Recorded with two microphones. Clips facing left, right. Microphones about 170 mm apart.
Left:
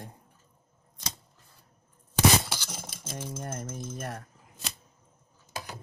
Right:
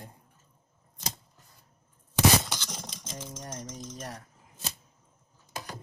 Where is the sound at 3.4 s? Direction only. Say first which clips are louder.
Left 3 dB; 55° left (ahead or behind).